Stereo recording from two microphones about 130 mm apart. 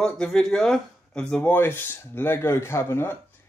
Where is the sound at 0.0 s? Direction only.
5° left (ahead or behind).